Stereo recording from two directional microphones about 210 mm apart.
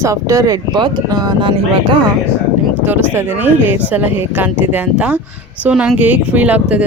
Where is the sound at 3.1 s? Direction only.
10° right (ahead or behind).